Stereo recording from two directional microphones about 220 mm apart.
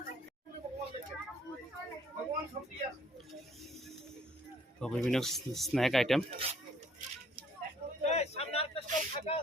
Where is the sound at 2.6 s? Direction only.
35° right (ahead or behind).